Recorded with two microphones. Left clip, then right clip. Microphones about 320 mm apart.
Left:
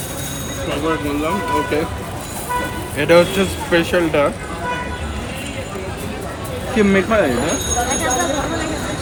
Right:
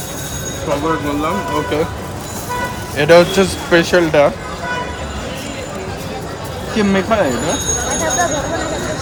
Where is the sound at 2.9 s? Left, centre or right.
Right.